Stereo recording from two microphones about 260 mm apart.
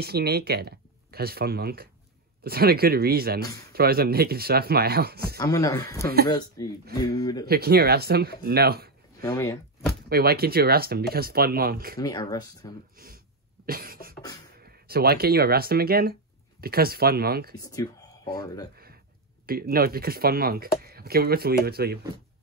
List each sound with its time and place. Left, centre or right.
0.0 s speech: right
5.4 s speech: centre
7.4 s speech: right
9.2 s speech: centre
10.0 s speech: right
12.0 s speech: centre
12.9 s a sound: right
13.7 s speech: right
17.6 s speech: centre
19.4 s speech: right